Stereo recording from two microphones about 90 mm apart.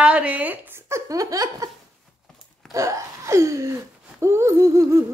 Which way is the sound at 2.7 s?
35° right (ahead or behind).